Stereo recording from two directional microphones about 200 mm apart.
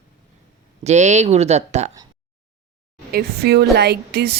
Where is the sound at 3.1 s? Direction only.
50° right (ahead or behind).